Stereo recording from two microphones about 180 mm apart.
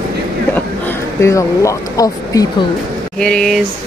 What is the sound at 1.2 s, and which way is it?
Speech, 15° left (ahead or behind).